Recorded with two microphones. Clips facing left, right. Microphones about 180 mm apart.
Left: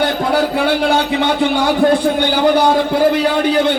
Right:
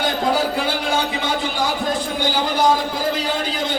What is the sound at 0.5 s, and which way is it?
A man's voice, 65° left (ahead or behind).